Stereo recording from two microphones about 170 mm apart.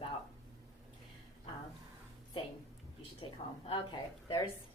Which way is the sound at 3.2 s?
30° left (ahead or behind).